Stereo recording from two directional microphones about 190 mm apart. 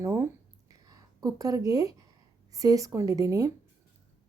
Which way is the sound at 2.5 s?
15° right (ahead or behind).